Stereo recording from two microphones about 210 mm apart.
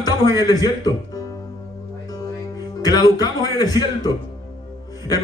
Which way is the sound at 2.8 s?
20° left (ahead or behind).